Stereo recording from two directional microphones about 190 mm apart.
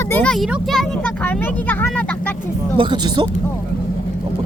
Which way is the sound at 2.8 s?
25° right (ahead or behind).